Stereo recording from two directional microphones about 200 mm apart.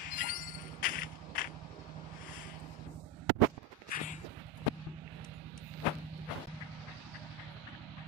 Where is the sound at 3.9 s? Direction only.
45° left (ahead or behind).